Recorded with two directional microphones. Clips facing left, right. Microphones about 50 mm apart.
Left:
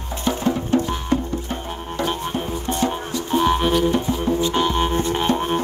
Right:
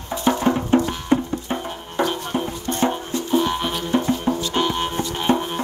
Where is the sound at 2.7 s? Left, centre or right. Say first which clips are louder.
Left 1 dB; left.